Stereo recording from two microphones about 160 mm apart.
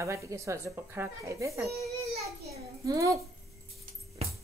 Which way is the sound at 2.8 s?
20° right (ahead or behind).